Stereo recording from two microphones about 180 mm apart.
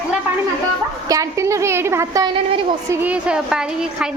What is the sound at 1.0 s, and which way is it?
A woman's voice, 20° right (ahead or behind).